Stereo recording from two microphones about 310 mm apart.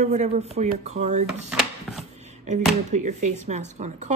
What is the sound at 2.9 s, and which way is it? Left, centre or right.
Speech, right.